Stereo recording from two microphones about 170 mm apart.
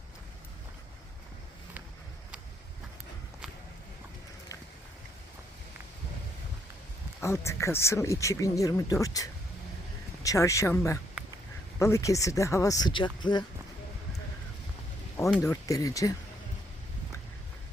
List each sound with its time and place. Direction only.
7.2 s speech: 15° left (ahead or behind)
15.4 s speech: 20° left (ahead or behind)